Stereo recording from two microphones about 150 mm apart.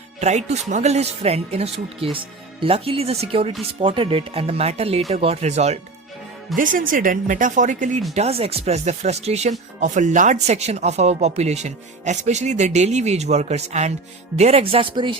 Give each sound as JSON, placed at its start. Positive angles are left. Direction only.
{"t": 0.2, "sound": "speech", "side_deg": -50}
{"t": 6.6, "sound": "speech", "side_deg": -65}
{"t": 8.1, "sound": "speech", "side_deg": -45}